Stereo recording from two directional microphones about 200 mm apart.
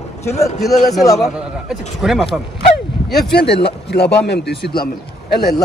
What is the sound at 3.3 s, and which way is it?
Speech, 55° left (ahead or behind).